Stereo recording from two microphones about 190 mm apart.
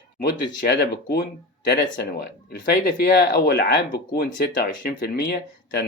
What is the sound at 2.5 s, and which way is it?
Speech, 55° left (ahead or behind).